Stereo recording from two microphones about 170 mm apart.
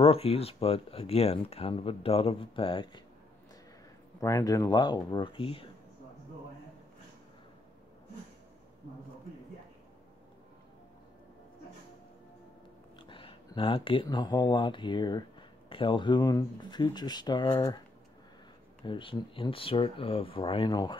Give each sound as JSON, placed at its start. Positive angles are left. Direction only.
{"t": 0.0, "sound": "speech", "side_deg": 35}
{"t": 4.2, "sound": "speech", "side_deg": 20}
{"t": 13.0, "sound": "speech", "side_deg": 30}
{"t": 18.9, "sound": "speech", "side_deg": 30}